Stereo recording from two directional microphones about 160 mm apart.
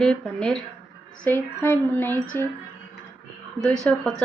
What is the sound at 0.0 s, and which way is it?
A woman's voice, 5° left (ahead or behind).